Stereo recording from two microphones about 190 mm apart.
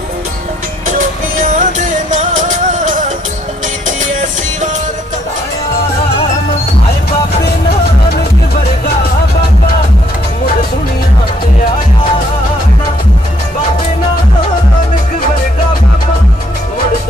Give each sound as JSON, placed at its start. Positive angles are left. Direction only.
{"t": 0.9, "sound": "music", "side_deg": -40}